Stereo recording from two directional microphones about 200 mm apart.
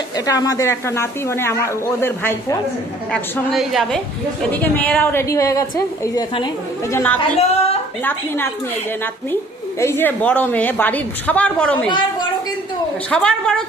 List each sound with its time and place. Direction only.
0.3 s a man's voice: 15° left (ahead or behind)
7.2 s speech: 30° left (ahead or behind)
9.8 s a man's voice: 10° left (ahead or behind)
13.1 s a woman's voice: 5° left (ahead or behind)